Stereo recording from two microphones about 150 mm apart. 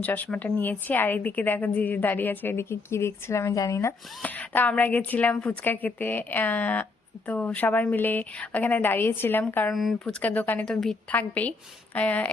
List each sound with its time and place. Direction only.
0.0 s a woman's voice: 10° left (ahead or behind)